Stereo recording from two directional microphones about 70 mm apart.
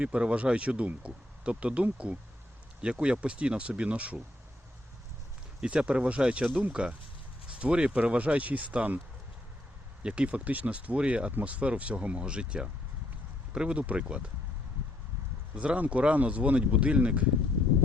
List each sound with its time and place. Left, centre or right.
0.0 s speech: centre
5.6 s speech: centre
10.0 s speech: centre
15.5 s speech: centre